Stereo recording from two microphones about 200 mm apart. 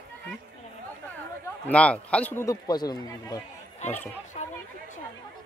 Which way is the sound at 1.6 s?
5° left (ahead or behind).